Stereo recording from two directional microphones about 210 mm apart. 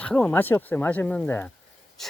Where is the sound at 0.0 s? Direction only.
5° left (ahead or behind).